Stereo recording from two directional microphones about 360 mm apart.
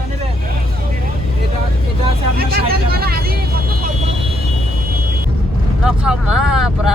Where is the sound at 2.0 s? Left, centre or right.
Right.